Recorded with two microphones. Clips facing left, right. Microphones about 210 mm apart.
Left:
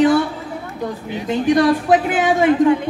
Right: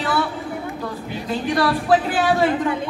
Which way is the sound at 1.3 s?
20° left (ahead or behind).